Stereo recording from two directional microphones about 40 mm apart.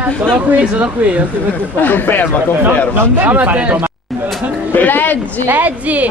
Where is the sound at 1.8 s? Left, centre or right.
Left.